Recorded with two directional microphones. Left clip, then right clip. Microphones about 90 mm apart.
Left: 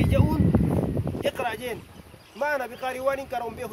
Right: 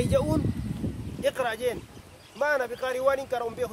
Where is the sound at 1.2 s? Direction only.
50° right (ahead or behind).